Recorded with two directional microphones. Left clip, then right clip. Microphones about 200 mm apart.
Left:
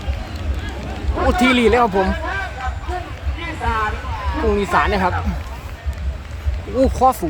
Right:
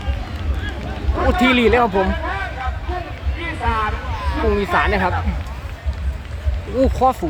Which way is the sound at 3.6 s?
15° left (ahead or behind).